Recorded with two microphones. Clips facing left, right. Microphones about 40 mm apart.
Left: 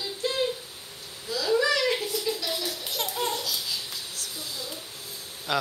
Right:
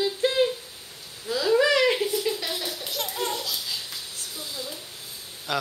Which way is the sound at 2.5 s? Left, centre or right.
Centre.